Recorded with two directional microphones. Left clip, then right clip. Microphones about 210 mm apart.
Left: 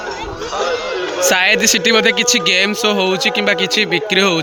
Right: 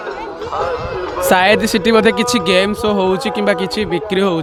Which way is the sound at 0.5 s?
45° left (ahead or behind).